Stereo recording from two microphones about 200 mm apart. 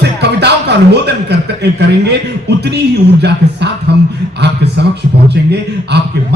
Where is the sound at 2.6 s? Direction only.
55° right (ahead or behind).